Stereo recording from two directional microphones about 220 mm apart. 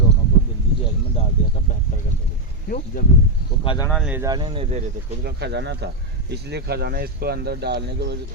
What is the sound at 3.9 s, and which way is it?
Speech, centre (ahead or behind).